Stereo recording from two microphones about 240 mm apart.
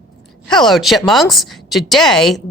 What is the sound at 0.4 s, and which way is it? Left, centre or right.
A woman's voice, centre.